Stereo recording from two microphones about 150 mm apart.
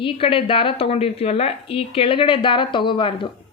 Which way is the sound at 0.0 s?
35° left (ahead or behind).